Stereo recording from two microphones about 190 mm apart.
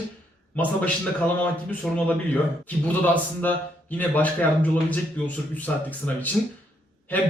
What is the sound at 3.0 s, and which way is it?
A man's voice, 10° left (ahead or behind).